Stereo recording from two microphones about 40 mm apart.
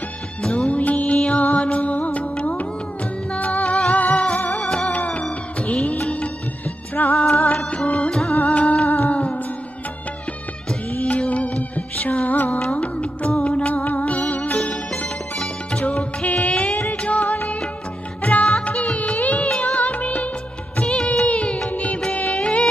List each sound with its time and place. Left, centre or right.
0.7 s music: left
4.6 s music: centre
4.9 s music: left
8.4 s music: left
11.0 s music: left
16.7 s music: left
17.0 s music of bollywood: left
18.2 s music: left